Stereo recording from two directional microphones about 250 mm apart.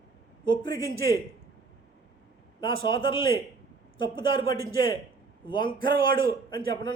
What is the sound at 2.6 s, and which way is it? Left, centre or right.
A man's voice, centre.